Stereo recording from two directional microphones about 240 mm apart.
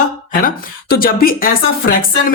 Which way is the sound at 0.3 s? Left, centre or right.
Left.